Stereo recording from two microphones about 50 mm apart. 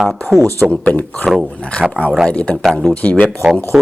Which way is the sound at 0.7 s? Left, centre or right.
Left.